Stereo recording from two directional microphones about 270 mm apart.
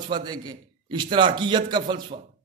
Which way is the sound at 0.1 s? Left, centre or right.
Centre.